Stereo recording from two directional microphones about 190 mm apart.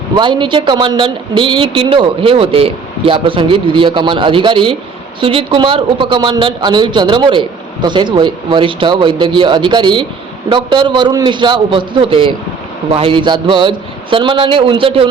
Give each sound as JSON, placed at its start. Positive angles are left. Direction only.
{"t": 0.2, "sound": "a man's voice", "side_deg": -25}